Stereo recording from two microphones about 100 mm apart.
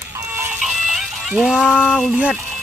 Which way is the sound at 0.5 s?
5° right (ahead or behind).